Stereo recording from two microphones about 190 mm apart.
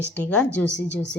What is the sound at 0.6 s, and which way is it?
Speech, 70° left (ahead or behind).